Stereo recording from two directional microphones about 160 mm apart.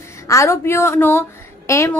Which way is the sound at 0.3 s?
20° left (ahead or behind).